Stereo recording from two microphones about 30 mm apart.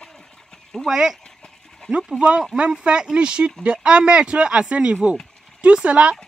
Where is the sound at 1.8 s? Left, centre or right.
Left.